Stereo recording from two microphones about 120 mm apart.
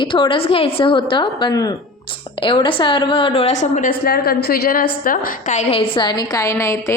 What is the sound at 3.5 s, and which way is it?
Speech, 75° left (ahead or behind).